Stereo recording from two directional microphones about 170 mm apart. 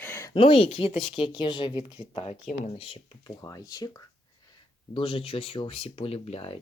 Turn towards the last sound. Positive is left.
turn(degrees=35)  # may be behind; listen again after turning